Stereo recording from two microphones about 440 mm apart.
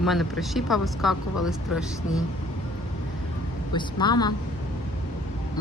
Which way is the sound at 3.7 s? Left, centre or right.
Centre.